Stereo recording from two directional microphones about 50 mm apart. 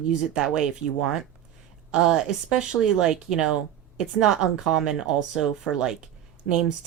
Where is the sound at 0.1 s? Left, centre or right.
Centre.